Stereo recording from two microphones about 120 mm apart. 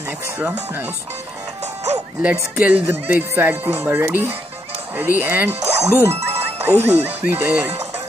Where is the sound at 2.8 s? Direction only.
20° right (ahead or behind).